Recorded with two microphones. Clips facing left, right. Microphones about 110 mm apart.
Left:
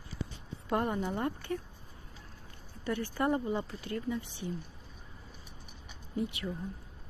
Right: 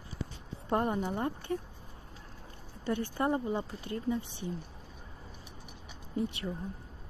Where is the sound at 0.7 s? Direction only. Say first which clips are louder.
Right 1 dB; 25° right (ahead or behind).